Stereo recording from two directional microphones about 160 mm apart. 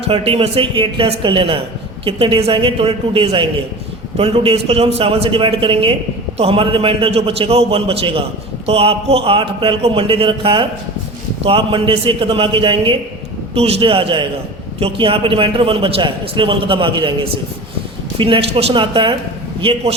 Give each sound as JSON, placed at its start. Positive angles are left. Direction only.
{"t": 0.1, "sound": "a man's voice", "side_deg": -35}